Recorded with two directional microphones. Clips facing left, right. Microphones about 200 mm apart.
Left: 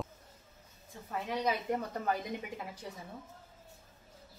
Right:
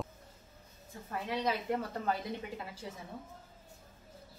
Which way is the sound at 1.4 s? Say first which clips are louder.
Left 1 dB; 15° left (ahead or behind).